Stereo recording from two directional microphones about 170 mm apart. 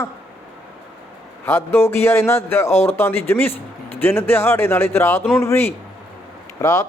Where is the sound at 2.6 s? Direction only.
40° left (ahead or behind).